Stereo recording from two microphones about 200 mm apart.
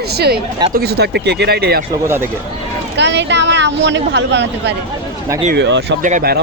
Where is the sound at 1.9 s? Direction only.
10° right (ahead or behind).